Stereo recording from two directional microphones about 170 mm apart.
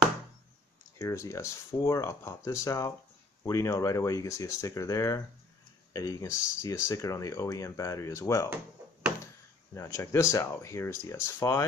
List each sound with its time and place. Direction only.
0.9 s speech: 15° left (ahead or behind)
9.8 s speech: 15° left (ahead or behind)